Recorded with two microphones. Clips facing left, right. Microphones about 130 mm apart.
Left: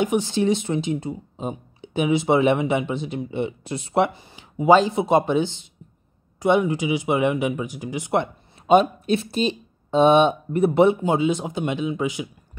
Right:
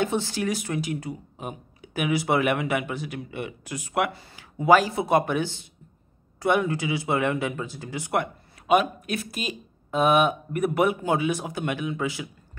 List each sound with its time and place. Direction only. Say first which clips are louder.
0.0 s speech: left 5 dB; 20° left (ahead or behind)